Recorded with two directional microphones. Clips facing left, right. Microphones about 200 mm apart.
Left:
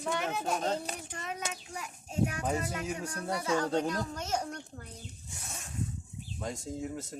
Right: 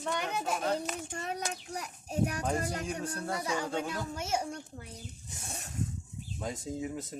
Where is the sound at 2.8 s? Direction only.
5° left (ahead or behind).